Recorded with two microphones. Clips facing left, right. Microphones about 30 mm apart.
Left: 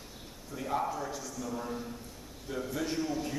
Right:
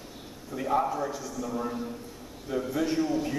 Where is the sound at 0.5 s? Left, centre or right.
Centre.